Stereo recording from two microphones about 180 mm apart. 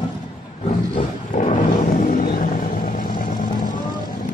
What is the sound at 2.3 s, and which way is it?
Vehicle, 50° left (ahead or behind).